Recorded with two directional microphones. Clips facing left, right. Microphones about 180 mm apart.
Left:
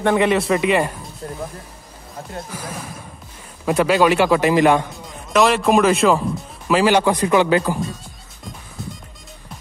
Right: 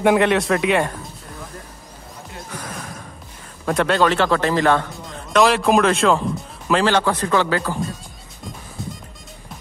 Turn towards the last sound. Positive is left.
turn(degrees=15)  # may be behind; listen again after turning